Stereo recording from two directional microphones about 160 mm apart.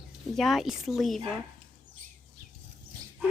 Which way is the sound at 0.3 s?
Centre (ahead or behind).